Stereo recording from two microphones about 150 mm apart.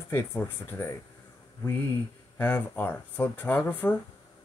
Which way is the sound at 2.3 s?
15° left (ahead or behind).